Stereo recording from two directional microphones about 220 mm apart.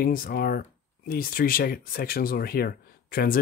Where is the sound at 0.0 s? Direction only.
40° left (ahead or behind).